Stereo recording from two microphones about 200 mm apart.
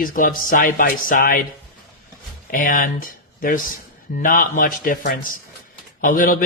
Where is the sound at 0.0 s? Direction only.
45° left (ahead or behind).